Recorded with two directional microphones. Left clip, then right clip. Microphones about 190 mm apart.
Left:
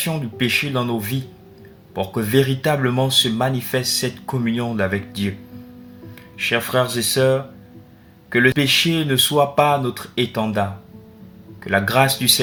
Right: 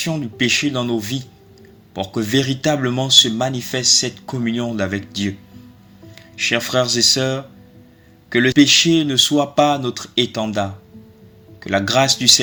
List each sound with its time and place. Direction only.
0.0 s speech: 40° right (ahead or behind)
6.4 s speech: 45° right (ahead or behind)